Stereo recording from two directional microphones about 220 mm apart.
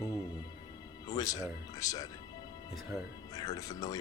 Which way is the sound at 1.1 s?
15° left (ahead or behind).